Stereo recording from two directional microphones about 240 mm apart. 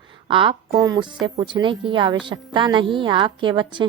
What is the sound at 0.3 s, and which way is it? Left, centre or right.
A woman's voice, right.